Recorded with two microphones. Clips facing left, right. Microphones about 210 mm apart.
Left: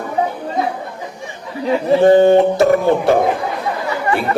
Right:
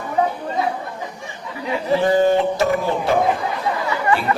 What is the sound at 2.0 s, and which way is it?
A man's voice, 55° left (ahead or behind).